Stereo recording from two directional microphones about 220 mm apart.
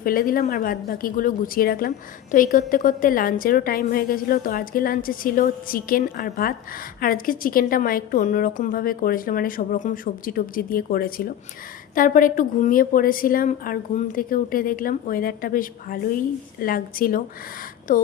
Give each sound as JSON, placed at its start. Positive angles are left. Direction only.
{"t": 0.0, "sound": "a woman's voice", "side_deg": 40}